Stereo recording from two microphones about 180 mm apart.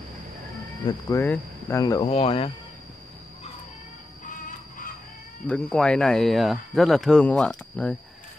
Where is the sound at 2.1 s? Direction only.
30° left (ahead or behind).